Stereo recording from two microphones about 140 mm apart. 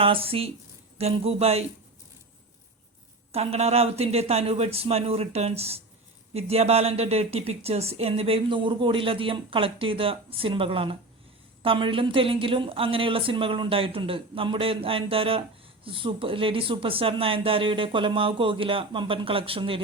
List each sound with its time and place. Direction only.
0.0 s speech: 40° right (ahead or behind)
3.3 s speech: 45° right (ahead or behind)